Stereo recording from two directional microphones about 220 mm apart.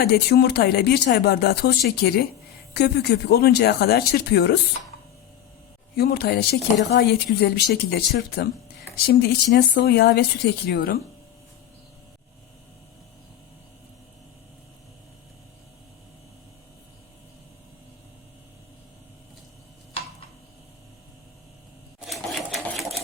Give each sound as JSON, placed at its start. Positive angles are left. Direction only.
{"t": 0.0, "sound": "speech", "side_deg": 45}
{"t": 6.0, "sound": "speech", "side_deg": 45}
{"t": 22.0, "sound": "sewing machine", "side_deg": 0}